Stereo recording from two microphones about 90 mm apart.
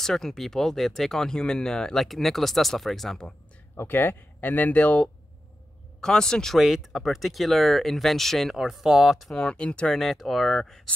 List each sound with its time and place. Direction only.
0.0 s speech: 5° left (ahead or behind)
3.7 s speech: 25° left (ahead or behind)
9.9 s speech: centre (ahead or behind)